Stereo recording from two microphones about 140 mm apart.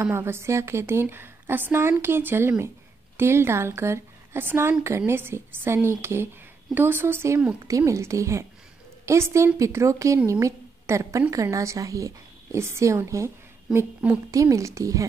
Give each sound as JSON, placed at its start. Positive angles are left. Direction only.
{"t": 0.0, "sound": "a woman's voice", "side_deg": -20}